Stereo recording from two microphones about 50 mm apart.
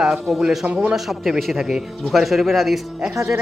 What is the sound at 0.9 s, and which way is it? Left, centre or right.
A man's voice, centre.